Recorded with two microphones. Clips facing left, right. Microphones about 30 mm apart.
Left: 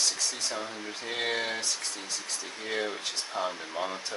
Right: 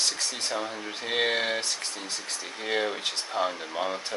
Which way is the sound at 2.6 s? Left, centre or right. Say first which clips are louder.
Right 5 dB; right.